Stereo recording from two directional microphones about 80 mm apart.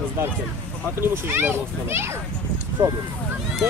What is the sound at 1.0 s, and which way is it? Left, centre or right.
A child's voice, right.